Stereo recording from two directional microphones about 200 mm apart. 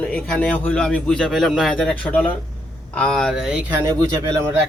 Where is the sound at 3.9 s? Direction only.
15° right (ahead or behind).